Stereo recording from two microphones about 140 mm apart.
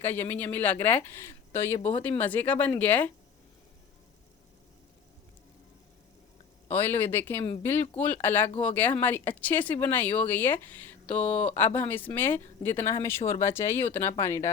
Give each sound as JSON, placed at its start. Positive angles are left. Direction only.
{"t": 0.0, "sound": "speech", "side_deg": 15}
{"t": 6.7, "sound": "speech", "side_deg": 15}